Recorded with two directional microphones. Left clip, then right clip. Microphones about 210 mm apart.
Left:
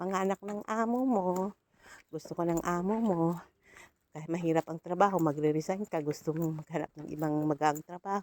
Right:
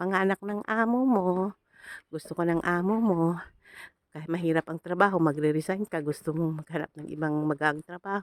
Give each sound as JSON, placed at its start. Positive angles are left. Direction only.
{"t": 0.0, "sound": "speech", "side_deg": -30}
{"t": 0.9, "sound": "speech", "side_deg": -40}
{"t": 1.9, "sound": "speech", "side_deg": -30}
{"t": 2.8, "sound": "speech", "side_deg": -45}